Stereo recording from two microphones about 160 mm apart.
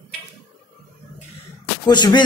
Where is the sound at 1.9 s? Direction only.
25° left (ahead or behind).